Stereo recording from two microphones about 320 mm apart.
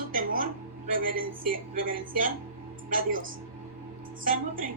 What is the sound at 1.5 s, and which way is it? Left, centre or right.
Speech, right.